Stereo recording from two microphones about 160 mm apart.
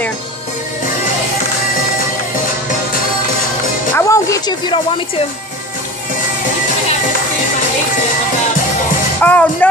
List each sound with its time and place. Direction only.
3.9 s a woman's voice: 20° left (ahead or behind)
9.2 s speech: 10° left (ahead or behind)